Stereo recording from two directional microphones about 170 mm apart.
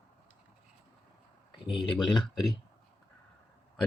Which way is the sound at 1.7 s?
30° left (ahead or behind).